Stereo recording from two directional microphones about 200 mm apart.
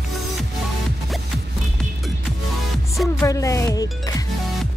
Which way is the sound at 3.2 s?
15° left (ahead or behind).